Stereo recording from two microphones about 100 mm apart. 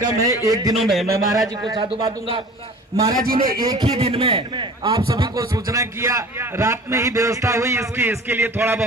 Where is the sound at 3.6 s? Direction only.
40° right (ahead or behind).